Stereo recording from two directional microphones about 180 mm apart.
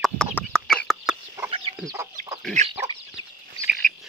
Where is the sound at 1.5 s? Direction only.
30° right (ahead or behind).